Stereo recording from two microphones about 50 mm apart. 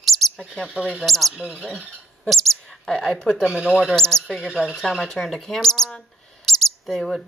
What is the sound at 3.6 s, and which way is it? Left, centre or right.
Speech, centre.